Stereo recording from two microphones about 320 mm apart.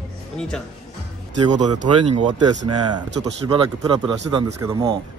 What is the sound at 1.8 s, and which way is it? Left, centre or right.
Speech, centre.